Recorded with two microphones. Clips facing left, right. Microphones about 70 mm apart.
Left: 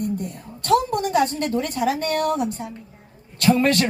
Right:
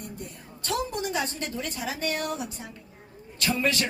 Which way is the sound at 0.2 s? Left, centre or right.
Left.